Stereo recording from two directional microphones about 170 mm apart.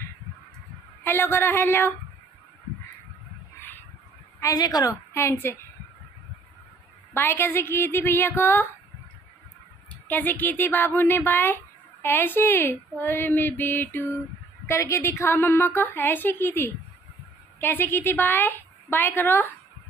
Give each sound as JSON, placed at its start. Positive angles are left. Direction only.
{"t": 1.0, "sound": "speech", "side_deg": 15}
{"t": 4.4, "sound": "speech", "side_deg": 20}
{"t": 7.2, "sound": "speech", "side_deg": 15}
{"t": 9.8, "sound": "speech", "side_deg": 10}